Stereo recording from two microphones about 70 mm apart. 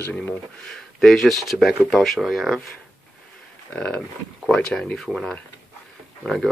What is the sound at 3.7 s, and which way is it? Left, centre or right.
Speech, centre.